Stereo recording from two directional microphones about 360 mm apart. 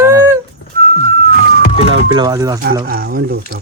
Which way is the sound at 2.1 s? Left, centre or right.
Centre.